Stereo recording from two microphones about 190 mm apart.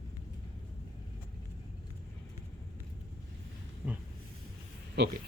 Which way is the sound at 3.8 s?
5° right (ahead or behind).